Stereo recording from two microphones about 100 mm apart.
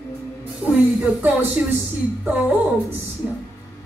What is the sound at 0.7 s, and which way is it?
Music, 15° right (ahead or behind).